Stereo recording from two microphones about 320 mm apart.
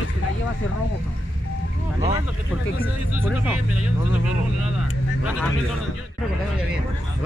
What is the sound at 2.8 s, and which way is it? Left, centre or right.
Speech, centre.